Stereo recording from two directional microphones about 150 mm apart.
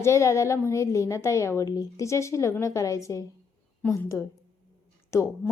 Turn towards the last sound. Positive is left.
turn(degrees=20)  # may be behind; listen again after turning